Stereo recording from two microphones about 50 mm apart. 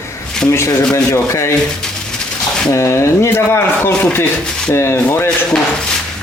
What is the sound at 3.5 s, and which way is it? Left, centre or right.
Speech, left.